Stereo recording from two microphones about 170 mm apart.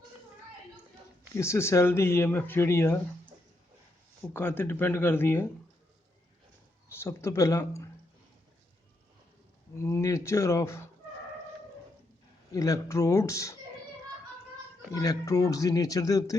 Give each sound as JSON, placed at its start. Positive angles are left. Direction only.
{"t": 1.4, "sound": "speech", "side_deg": 15}
{"t": 4.4, "sound": "speech", "side_deg": 10}
{"t": 7.0, "sound": "a man's voice", "side_deg": 15}
{"t": 9.7, "sound": "speech", "side_deg": 15}
{"t": 12.5, "sound": "a man's voice", "side_deg": 20}
{"t": 14.9, "sound": "a man's voice", "side_deg": 20}